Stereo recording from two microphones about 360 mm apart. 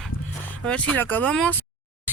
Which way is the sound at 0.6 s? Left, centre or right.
Centre.